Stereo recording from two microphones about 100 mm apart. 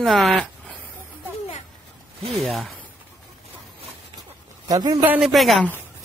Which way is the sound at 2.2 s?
80° right.